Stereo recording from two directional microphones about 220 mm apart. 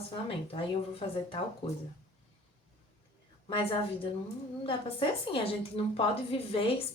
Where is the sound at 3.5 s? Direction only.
25° left (ahead or behind).